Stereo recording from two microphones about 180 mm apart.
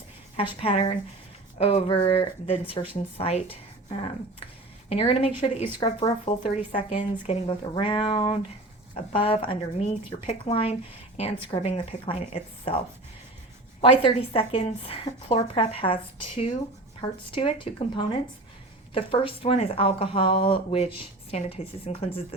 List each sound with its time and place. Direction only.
0.6 s speech: 30° left (ahead or behind)
13.8 s speech: 30° left (ahead or behind)